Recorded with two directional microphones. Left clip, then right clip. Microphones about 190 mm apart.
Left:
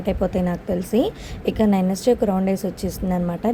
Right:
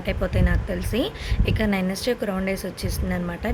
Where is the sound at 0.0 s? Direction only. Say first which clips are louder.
Left 4 dB; 30° left (ahead or behind).